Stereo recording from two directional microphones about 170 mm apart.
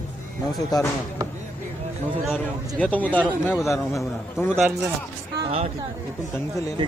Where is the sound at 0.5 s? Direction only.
20° left (ahead or behind).